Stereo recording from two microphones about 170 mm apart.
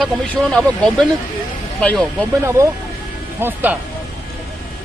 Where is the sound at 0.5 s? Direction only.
5° left (ahead or behind).